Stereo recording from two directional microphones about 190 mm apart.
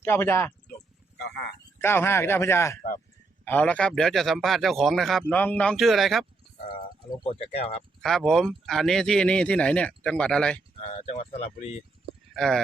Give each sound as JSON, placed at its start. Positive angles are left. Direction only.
{"t": 0.0, "sound": "speech", "side_deg": 15}
{"t": 1.2, "sound": "speech", "side_deg": 60}
{"t": 1.8, "sound": "a man's voice", "side_deg": 10}
{"t": 7.3, "sound": "speech", "side_deg": 30}
{"t": 8.0, "sound": "a man's voice", "side_deg": 0}
{"t": 10.8, "sound": "speech", "side_deg": 35}
{"t": 12.3, "sound": "speech", "side_deg": 0}